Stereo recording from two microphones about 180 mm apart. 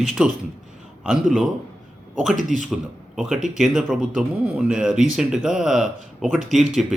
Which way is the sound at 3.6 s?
Centre (ahead or behind).